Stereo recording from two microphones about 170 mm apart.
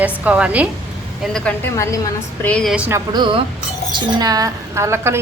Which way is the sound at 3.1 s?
30° right (ahead or behind).